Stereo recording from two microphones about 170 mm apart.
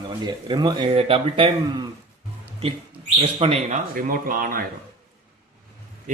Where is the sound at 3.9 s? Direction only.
55° right (ahead or behind).